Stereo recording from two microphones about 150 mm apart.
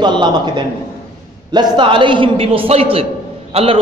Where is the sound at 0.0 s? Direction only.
30° right (ahead or behind).